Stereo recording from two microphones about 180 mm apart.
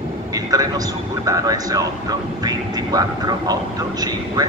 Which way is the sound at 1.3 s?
20° right (ahead or behind).